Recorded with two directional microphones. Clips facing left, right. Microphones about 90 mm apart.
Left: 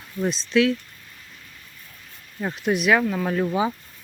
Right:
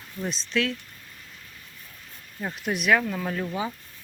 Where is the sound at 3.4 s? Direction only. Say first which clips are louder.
Left 7 dB; 20° left (ahead or behind).